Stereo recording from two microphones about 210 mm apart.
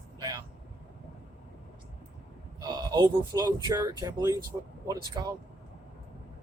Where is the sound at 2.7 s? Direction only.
20° right (ahead or behind).